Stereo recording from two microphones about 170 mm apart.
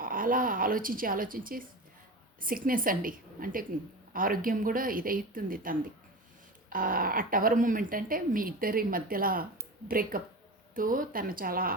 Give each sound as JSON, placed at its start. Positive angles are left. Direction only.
{"t": 0.0, "sound": "speech", "side_deg": -55}